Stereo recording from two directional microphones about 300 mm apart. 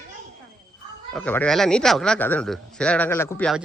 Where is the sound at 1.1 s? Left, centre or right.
Centre.